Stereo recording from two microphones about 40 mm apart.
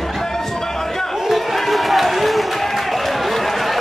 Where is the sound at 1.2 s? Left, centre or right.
Centre.